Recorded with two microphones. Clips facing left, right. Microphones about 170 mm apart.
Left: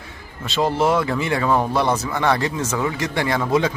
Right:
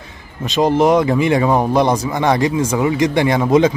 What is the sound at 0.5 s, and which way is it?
Speech, 15° right (ahead or behind).